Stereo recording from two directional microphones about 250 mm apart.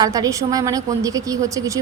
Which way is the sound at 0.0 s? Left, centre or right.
Centre.